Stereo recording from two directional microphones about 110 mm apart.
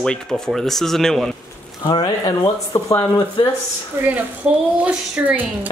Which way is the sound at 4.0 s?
20° right (ahead or behind).